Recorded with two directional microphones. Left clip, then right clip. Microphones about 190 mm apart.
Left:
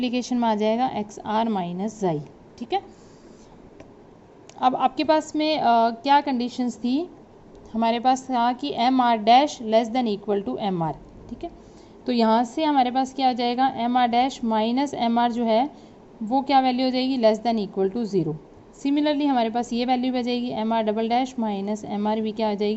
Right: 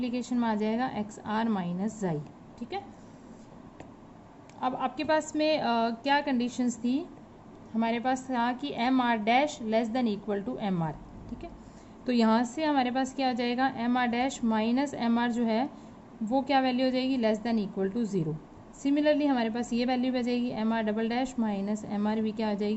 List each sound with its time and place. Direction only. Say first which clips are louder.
0.0 s a woman's voice: left 7 dB; 25° left (ahead or behind)
2.6 s a woman's voice: left 11 dB; 40° left (ahead or behind)
4.6 s a woman's voice: left 10 dB; 30° left (ahead or behind)
12.0 s a woman's voice: left 6 dB; 20° left (ahead or behind)